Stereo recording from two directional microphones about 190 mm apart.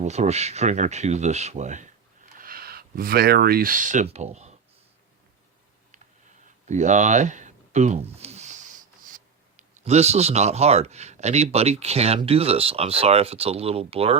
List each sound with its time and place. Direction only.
0.0 s speech: 35° right (ahead or behind)
2.4 s speech: 50° right (ahead or behind)
6.7 s speech: 40° right (ahead or behind)